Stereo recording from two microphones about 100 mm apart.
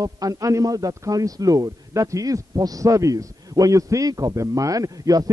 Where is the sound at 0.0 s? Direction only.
35° right (ahead or behind).